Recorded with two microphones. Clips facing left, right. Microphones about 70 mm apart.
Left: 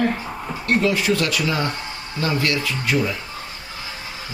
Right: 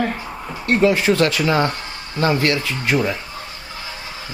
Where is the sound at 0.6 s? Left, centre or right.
Right.